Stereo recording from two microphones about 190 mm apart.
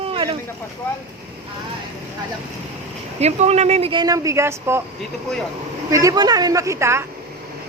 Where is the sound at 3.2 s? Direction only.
35° right (ahead or behind); by 4.8 s 15° right (ahead or behind).